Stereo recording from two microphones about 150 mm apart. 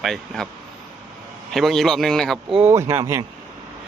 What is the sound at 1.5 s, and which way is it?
Speech, centre (ahead or behind).